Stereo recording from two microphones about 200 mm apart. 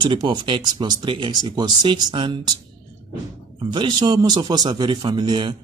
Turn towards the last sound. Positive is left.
turn(degrees=-25)  # may be behind; listen again after turning